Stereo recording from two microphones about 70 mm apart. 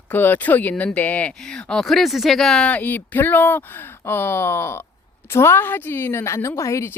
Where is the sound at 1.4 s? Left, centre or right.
Centre.